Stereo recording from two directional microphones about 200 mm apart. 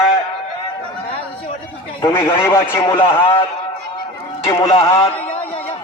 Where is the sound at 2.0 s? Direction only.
20° left (ahead or behind).